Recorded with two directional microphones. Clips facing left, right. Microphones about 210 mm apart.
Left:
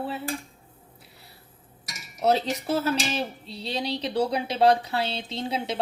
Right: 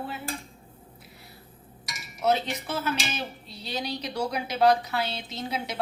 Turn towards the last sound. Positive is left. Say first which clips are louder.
# left 3 dB
turn(degrees=30)  # may be behind; listen again after turning